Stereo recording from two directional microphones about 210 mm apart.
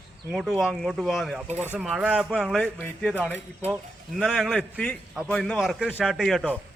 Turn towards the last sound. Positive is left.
turn(degrees=0)  # may be behind; listen again after turning